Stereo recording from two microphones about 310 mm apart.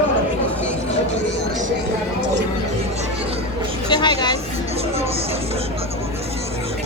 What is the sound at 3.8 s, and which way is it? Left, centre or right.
Speech, centre.